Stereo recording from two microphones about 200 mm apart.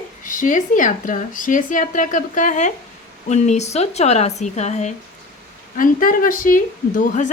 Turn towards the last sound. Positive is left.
turn(degrees=40)  # may be behind; listen again after turning